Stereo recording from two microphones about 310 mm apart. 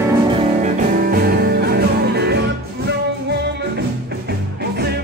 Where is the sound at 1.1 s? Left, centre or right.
Right.